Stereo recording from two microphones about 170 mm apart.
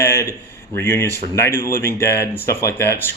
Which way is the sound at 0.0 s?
15° left (ahead or behind).